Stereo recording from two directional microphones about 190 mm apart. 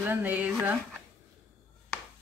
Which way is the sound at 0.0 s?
10° right (ahead or behind).